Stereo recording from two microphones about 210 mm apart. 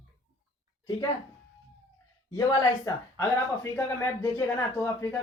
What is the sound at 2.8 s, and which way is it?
A woman's voice, 10° left (ahead or behind).